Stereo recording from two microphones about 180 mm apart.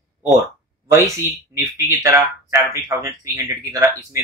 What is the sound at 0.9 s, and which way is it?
Speech, 15° right (ahead or behind).